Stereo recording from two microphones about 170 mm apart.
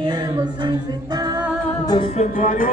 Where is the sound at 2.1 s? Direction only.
50° left (ahead or behind).